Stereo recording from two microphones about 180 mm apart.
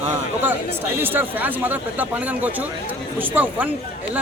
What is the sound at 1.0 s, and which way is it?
Speech, 10° right (ahead or behind).